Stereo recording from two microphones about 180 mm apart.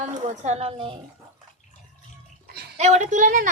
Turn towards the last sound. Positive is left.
turn(degrees=-45)  # may be behind; listen again after turning